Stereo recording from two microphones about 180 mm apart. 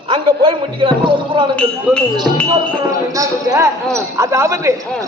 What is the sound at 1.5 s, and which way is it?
Speech, 5° left (ahead or behind).